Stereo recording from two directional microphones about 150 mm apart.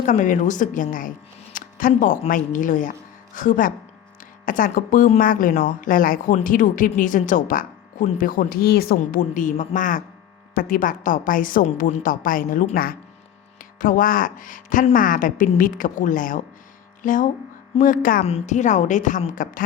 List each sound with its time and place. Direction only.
0.0 s speech: 55° left (ahead or behind)
10.5 s speech: 70° left (ahead or behind)
12.7 s speech: 80° left
13.6 s music: 65° left (ahead or behind)
14.9 s speech: 65° left (ahead or behind)
18.3 s a woman's voice: 45° left (ahead or behind)